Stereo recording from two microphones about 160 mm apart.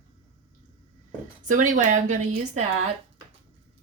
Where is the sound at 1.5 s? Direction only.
55° right (ahead or behind).